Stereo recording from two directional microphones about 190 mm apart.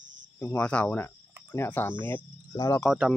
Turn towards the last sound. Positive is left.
turn(degrees=0)  # may be behind; listen again after turning